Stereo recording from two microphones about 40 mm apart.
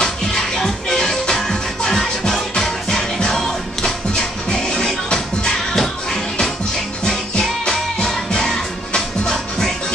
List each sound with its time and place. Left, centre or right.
0.0 s music: centre
7.1 s music: centre